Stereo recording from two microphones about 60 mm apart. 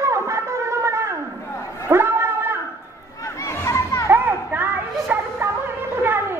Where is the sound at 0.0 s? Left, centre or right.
Right.